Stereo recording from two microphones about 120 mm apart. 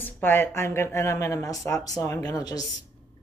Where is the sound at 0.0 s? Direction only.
20° left (ahead or behind).